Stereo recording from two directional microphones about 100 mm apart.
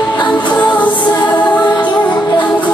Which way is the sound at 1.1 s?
45° left (ahead or behind).